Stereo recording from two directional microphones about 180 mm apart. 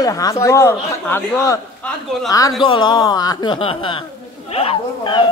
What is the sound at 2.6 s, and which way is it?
Speech, 25° left (ahead or behind).